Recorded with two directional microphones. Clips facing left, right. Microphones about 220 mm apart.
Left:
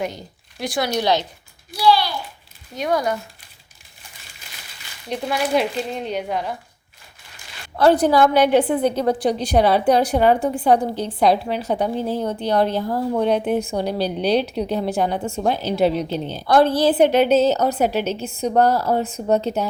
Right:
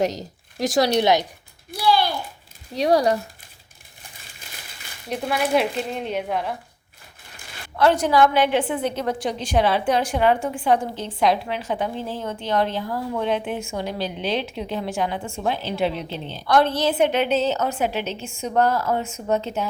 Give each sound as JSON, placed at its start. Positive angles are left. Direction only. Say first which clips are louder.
{"t": 0.2, "sound": "speech", "louder": "right 4 dB", "side_deg": -40}
{"t": 1.7, "sound": "a sound", "louder": "left 3 dB", "side_deg": -50}
{"t": 2.7, "sound": "speech", "louder": "right 3 dB", "side_deg": -35}
{"t": 5.0, "sound": "speech", "louder": "left 1 dB", "side_deg": -5}
{"t": 7.8, "sound": "a woman's voice", "louder": "left 3 dB", "side_deg": 35}